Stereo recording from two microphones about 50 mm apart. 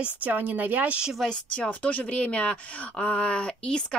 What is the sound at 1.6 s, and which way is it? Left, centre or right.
Speech, left.